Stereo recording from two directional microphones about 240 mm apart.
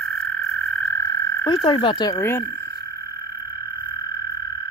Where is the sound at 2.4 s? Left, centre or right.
Right.